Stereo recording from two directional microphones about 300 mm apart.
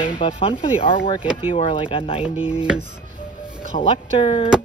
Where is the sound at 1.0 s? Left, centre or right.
Centre.